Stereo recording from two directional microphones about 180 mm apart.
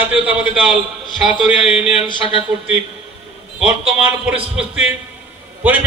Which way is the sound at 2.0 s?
30° left (ahead or behind).